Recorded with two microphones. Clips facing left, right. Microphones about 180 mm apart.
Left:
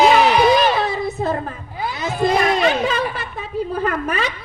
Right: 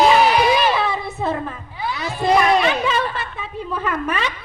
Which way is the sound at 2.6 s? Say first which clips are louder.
Left 1 dB; 40° left (ahead or behind).